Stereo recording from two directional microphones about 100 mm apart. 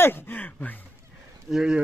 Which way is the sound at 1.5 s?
5° right (ahead or behind).